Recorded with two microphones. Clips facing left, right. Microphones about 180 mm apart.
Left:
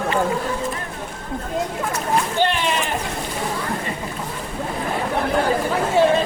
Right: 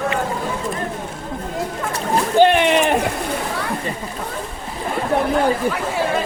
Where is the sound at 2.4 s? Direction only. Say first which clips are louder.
Right 7 dB; 60° right (ahead or behind).